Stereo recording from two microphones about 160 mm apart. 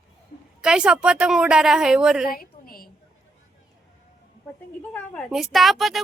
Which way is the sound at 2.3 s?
65° left (ahead or behind).